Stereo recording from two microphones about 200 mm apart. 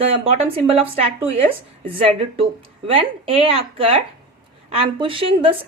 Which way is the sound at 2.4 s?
30° right (ahead or behind).